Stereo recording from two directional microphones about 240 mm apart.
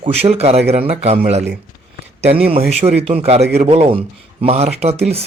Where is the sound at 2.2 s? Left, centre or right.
Right.